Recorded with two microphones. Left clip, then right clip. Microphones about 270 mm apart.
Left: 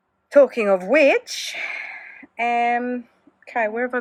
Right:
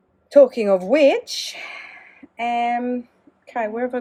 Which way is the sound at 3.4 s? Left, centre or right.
Centre.